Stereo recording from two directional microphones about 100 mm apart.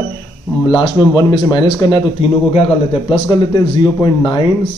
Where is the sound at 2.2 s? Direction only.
80° left.